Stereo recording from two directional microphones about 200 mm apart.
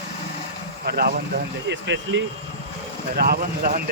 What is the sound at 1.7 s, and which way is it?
Speech, 60° right (ahead or behind).